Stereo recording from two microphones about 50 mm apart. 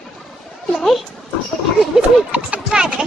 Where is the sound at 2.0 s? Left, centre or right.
Right.